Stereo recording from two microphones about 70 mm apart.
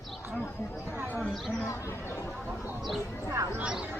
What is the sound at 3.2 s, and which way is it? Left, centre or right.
Speech, right.